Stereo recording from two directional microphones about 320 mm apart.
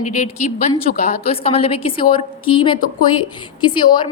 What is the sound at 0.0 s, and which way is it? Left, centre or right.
A woman's voice, left.